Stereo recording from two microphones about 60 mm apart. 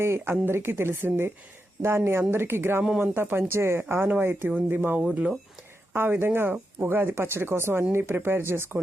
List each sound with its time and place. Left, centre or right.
0.0 s speech: right